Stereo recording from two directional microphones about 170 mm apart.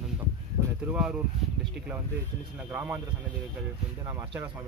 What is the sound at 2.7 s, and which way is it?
Speech, 10° right (ahead or behind).